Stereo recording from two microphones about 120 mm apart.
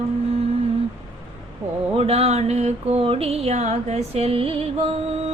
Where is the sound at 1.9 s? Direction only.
55° right (ahead or behind).